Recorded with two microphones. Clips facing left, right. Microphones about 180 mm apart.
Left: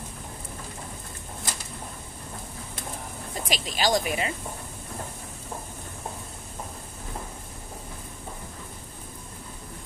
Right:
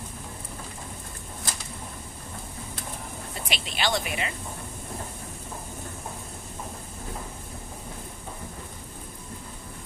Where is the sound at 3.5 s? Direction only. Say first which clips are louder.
Left 4 dB; 40° left (ahead or behind).